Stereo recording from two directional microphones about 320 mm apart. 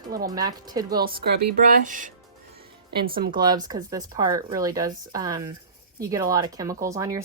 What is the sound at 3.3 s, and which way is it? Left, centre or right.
A woman's voice, centre.